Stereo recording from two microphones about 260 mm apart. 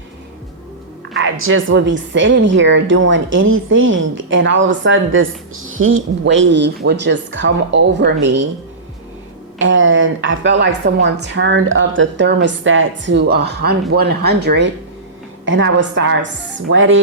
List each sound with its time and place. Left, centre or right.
1.1 s a woman's voice: right
9.6 s a woman's voice: right